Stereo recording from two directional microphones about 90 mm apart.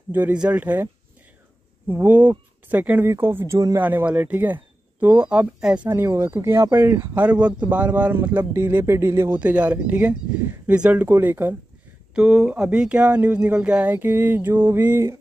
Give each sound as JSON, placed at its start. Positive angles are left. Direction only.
{"t": 0.1, "sound": "speech", "side_deg": -15}
{"t": 1.9, "sound": "speech", "side_deg": -20}
{"t": 3.8, "sound": "speech", "side_deg": -15}
{"t": 5.9, "sound": "speech", "side_deg": -30}
{"t": 7.2, "sound": "speech", "side_deg": -15}
{"t": 9.4, "sound": "speech", "side_deg": -15}
{"t": 12.2, "sound": "speech", "side_deg": -10}